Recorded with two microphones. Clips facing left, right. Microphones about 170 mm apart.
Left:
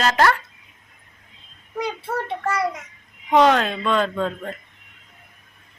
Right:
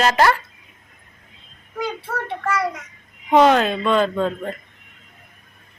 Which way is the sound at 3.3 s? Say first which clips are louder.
Right 2 dB; 5° right (ahead or behind).